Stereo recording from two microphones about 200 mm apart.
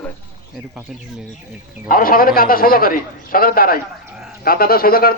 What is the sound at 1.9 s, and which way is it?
A man's voice, 45° left (ahead or behind).